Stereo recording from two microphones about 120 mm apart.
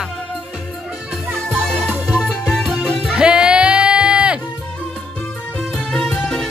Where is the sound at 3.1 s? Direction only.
10° right (ahead or behind).